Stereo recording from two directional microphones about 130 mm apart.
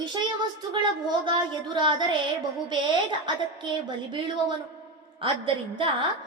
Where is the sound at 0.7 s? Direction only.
35° right (ahead or behind).